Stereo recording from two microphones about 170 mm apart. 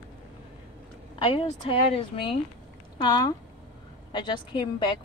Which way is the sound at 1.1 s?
30° left (ahead or behind).